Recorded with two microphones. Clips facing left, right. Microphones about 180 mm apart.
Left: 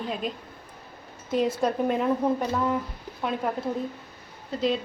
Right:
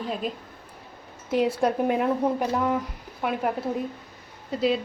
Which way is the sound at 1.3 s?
10° right (ahead or behind).